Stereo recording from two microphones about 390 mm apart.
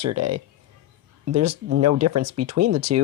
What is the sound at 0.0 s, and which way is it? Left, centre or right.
Speech, right.